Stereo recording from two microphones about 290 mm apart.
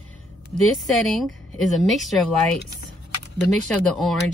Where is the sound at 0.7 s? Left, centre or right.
Centre.